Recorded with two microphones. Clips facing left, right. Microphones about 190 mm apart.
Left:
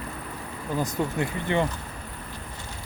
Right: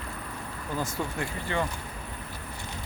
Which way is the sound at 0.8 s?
20° left (ahead or behind).